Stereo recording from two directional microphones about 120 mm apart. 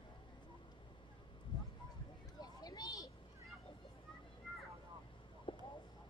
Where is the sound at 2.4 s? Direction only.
35° left (ahead or behind).